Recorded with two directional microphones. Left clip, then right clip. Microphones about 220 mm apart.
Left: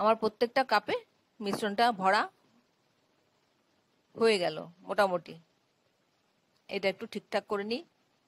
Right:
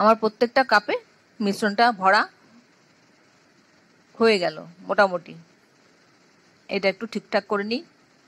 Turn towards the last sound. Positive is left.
turn(degrees=45)  # may be behind; listen again after turning